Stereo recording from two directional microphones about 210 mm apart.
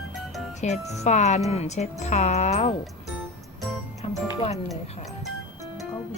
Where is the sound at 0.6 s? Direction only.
35° left (ahead or behind).